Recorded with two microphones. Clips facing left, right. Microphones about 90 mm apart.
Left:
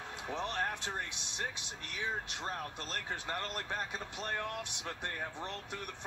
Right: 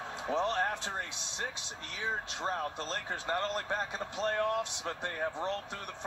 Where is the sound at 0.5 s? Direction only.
25° right (ahead or behind).